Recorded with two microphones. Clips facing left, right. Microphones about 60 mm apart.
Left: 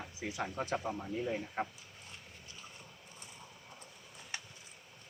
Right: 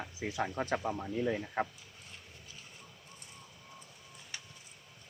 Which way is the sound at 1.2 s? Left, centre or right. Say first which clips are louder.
Right 4 dB; right.